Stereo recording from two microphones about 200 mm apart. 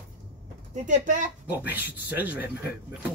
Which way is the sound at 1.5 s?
10° right (ahead or behind).